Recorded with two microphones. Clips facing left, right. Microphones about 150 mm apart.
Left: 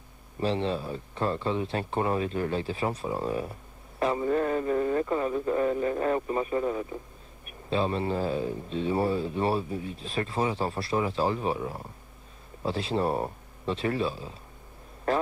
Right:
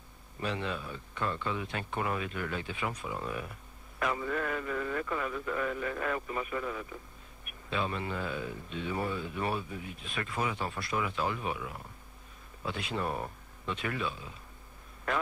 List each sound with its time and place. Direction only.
0.4 s a man's voice: 30° left (ahead or behind)